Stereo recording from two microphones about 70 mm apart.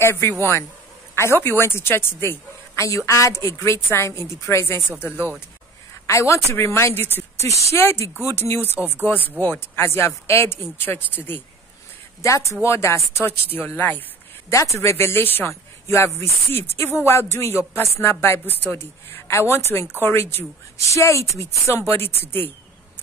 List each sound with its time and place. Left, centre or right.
0.0 s speech: left
4.8 s speech: centre
6.0 s speech: left
8.7 s speech: right
9.0 s speech: left
12.2 s speech: left
14.5 s speech: left